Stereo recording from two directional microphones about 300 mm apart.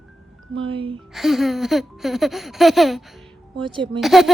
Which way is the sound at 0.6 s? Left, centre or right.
Centre.